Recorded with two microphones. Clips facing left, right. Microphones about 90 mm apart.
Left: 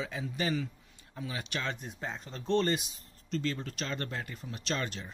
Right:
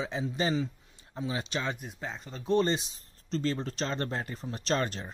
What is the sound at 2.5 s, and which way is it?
Speech, 15° right (ahead or behind).